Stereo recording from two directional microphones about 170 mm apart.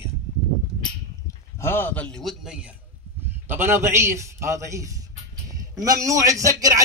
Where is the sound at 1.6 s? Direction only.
15° left (ahead or behind).